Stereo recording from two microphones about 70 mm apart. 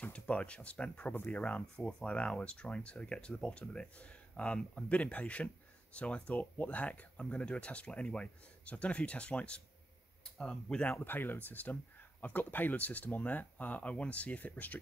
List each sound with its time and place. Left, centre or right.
0.1 s speech: centre